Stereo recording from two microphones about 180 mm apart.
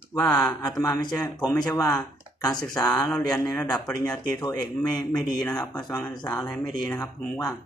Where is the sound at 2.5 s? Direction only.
5° left (ahead or behind).